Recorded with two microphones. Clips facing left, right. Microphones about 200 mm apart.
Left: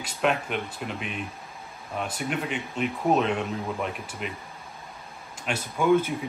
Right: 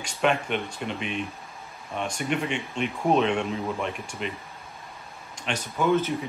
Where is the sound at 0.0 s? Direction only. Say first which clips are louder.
Right 1 dB; 5° left (ahead or behind).